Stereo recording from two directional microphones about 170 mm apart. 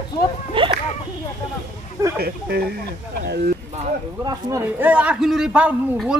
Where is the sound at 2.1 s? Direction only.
65° right (ahead or behind).